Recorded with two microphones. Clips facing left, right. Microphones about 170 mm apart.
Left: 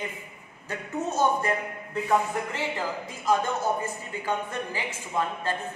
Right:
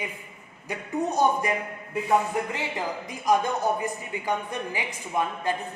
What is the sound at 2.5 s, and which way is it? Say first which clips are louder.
Speech: even; 15° right (ahead or behind).